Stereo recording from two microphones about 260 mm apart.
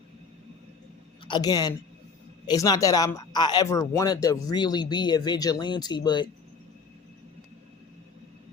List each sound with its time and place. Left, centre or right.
1.2 s a woman's voice: centre